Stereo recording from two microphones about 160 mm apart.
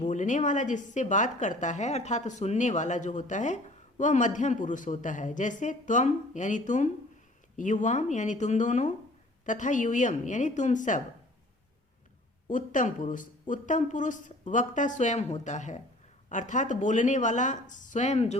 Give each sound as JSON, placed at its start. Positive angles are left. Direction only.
{"t": 0.0, "sound": "a woman's voice", "side_deg": 50}
{"t": 12.5, "sound": "a woman's voice", "side_deg": 55}